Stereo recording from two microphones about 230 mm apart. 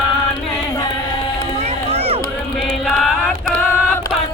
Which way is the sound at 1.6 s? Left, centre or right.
Right.